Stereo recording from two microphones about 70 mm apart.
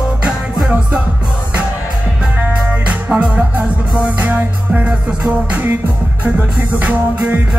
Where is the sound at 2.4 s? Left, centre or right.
Right.